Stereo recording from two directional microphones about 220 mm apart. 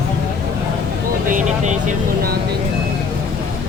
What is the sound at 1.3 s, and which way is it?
Vehicle, 35° right (ahead or behind).